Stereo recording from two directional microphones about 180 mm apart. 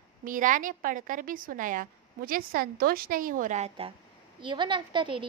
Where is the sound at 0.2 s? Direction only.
45° right (ahead or behind).